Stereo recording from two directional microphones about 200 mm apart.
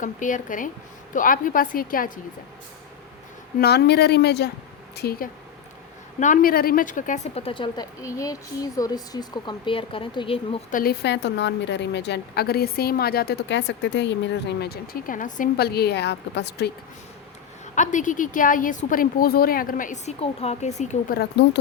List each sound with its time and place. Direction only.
0.0 s a woman's voice: 40° left (ahead or behind)
3.6 s a woman's voice: 55° left (ahead or behind)
6.1 s a woman's voice: 40° left (ahead or behind)
10.7 s a woman's voice: 45° left (ahead or behind)
17.7 s a woman's voice: 40° left (ahead or behind)
21.2 s a woman's voice: 60° left (ahead or behind)